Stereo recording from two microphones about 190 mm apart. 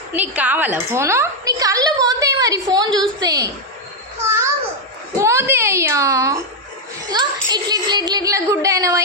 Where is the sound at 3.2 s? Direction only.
20° right (ahead or behind).